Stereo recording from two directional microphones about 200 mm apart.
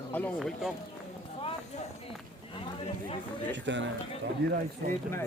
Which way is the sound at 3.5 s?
65° right (ahead or behind).